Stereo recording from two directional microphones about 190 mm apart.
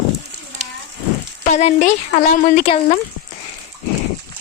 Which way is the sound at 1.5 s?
35° left (ahead or behind).